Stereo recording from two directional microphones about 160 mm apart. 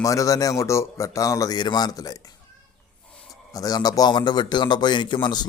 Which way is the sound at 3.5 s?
20° left (ahead or behind).